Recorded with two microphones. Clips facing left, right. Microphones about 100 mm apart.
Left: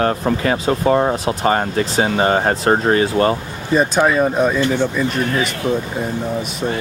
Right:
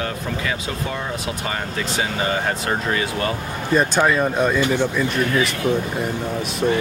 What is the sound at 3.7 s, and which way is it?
Speech, 5° left (ahead or behind).